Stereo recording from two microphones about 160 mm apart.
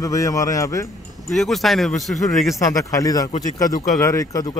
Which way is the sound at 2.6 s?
20° left (ahead or behind).